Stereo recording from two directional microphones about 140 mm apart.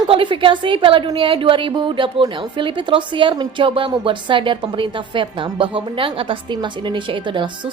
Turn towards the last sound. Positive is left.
turn(degrees=-35)  # may be behind; listen again after turning